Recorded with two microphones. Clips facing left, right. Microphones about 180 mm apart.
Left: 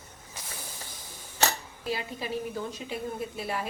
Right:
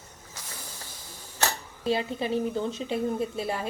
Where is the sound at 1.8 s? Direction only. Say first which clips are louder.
Right 7 dB; 30° right (ahead or behind).